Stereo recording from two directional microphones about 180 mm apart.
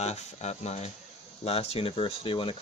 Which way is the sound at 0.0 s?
35° left (ahead or behind).